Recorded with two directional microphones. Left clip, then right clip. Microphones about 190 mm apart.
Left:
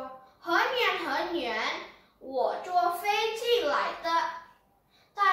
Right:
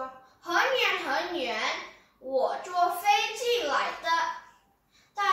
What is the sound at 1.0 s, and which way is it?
A woman's voice, 15° left (ahead or behind).